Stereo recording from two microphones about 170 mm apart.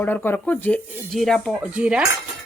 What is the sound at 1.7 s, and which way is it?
Cutlery, 5° right (ahead or behind).